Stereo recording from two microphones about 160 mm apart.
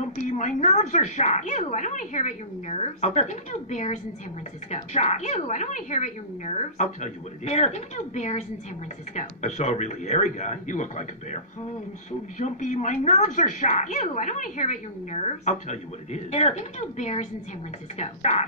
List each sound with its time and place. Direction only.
0.4 s speech: 50° left (ahead or behind)
12.4 s speech: 50° left (ahead or behind)